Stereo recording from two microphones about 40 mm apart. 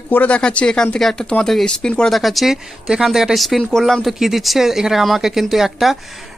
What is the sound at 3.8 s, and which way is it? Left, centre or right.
Speech, centre.